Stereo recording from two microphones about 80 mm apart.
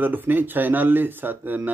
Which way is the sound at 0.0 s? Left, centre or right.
Right.